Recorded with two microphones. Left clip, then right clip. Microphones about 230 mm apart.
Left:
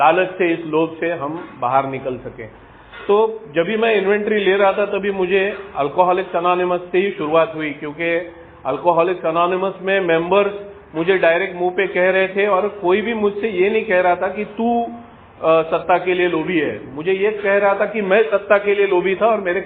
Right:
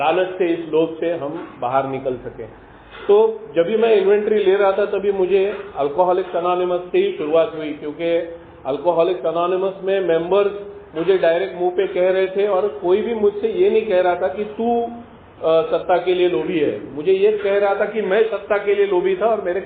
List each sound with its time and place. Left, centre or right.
0.0 s a man's voice: left